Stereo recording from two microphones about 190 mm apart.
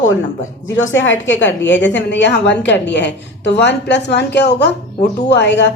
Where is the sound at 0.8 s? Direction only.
80° left.